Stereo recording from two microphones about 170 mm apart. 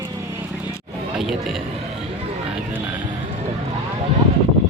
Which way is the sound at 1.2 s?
Centre (ahead or behind).